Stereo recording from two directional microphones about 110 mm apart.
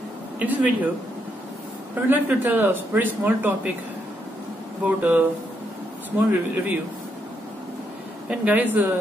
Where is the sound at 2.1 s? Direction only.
15° right (ahead or behind).